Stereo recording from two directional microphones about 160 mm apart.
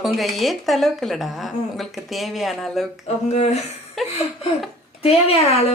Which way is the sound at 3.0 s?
45° left (ahead or behind).